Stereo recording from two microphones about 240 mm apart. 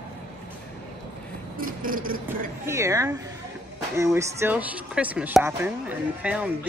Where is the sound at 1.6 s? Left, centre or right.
Right.